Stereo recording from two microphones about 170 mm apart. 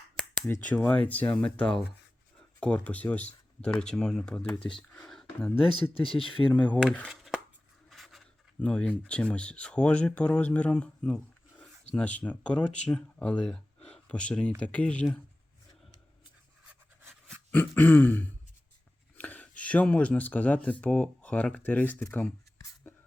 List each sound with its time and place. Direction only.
0.2 s speech: 10° left (ahead or behind)
6.0 s speech: 30° left (ahead or behind)
6.5 s speech: 10° left (ahead or behind)
7.9 s a sound: centre (ahead or behind)
8.5 s speech: 5° left (ahead or behind)
17.2 s throat clearing: 10° left (ahead or behind)
19.1 s speech: 10° left (ahead or behind)